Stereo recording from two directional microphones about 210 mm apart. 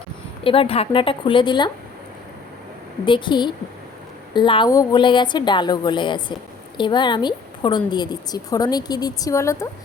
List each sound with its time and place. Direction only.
0.4 s a woman's voice: 25° left (ahead or behind)
3.1 s a woman's voice: 20° left (ahead or behind)